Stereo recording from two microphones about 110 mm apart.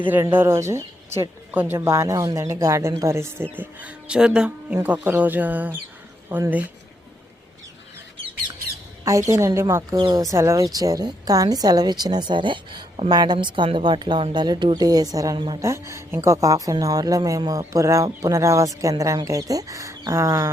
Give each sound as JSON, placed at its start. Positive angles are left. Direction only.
{"t": 0.1, "sound": "speech", "side_deg": -20}
{"t": 9.0, "sound": "speech", "side_deg": -25}
{"t": 10.0, "sound": "speech", "side_deg": -35}